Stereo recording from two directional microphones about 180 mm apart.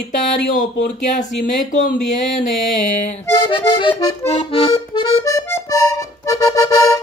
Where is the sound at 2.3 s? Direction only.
Centre (ahead or behind).